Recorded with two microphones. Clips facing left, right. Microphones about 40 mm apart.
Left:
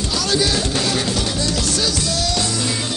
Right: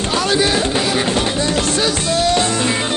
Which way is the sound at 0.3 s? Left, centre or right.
Right.